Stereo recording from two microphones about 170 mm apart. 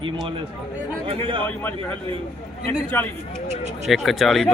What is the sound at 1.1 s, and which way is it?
Speech, 30° right (ahead or behind).